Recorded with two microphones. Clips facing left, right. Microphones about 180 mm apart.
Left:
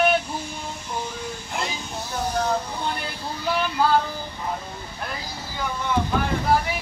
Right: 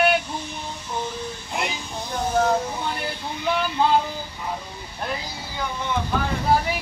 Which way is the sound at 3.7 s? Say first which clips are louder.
Even; 20° right (ahead or behind).